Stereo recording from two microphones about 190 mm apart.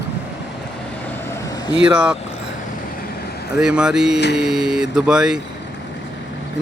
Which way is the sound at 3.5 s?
5° right (ahead or behind).